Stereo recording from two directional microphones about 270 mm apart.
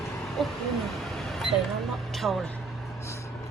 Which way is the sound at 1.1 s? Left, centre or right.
Centre.